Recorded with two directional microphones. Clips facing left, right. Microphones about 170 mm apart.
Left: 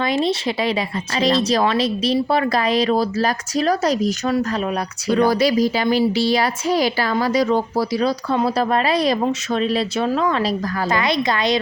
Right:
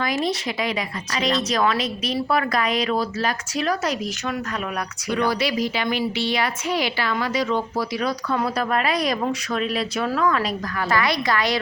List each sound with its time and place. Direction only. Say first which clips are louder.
0.0 s a woman's voice: left 4 dB; 25° left (ahead or behind)